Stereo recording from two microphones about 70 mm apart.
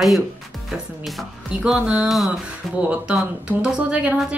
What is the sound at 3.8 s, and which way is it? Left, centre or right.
Music, centre.